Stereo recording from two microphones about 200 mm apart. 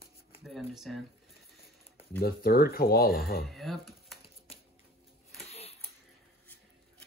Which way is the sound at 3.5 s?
Centre (ahead or behind).